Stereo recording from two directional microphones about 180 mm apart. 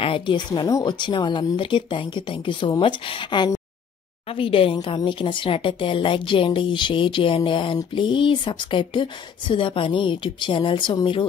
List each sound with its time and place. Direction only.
0.0 s a woman's voice: 30° left (ahead or behind)